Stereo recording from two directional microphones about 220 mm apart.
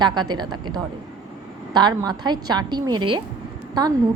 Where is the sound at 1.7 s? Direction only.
20° right (ahead or behind).